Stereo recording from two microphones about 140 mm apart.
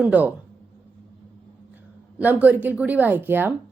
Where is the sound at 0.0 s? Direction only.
10° right (ahead or behind).